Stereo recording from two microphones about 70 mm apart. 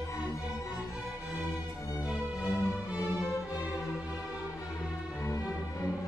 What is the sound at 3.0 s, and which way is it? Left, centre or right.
Music, left.